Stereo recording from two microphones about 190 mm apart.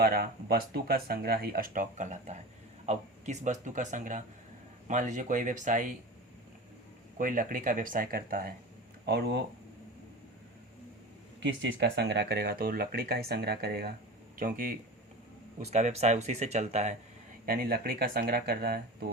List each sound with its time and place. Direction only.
0.0 s speech: 55° right (ahead or behind)
7.2 s speech: 45° right (ahead or behind)
9.0 s speech: 60° right (ahead or behind)
11.3 s speech: 70° right (ahead or behind); by 14.8 s 50° right (ahead or behind)
15.6 s speech: 35° right (ahead or behind)
17.4 s speech: 50° right (ahead or behind)